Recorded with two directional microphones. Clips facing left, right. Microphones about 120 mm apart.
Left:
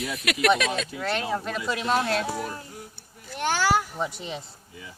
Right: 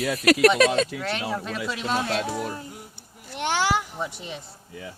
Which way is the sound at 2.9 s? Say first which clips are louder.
Right 1 dB; 20° right (ahead or behind).